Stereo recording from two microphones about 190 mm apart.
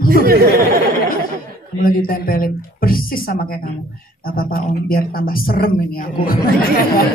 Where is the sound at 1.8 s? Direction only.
50° left (ahead or behind).